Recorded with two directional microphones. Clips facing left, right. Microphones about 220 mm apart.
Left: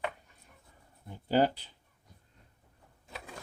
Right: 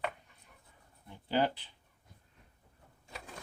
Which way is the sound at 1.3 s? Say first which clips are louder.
Left 4 dB; 40° left (ahead or behind).